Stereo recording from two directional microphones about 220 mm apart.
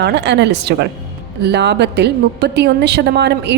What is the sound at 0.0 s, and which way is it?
A woman's voice, 50° right (ahead or behind).